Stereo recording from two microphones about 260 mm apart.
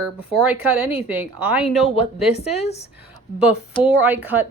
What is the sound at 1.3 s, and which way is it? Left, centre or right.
Speech, centre.